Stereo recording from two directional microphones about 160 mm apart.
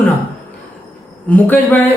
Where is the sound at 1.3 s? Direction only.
10° left (ahead or behind).